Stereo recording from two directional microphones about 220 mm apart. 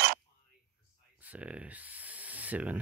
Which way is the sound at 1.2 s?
5° right (ahead or behind).